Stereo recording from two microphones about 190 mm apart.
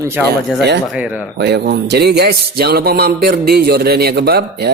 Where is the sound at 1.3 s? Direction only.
60° right (ahead or behind).